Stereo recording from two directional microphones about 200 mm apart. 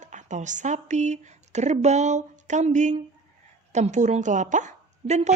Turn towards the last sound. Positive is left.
turn(degrees=-35)  # may be behind; listen again after turning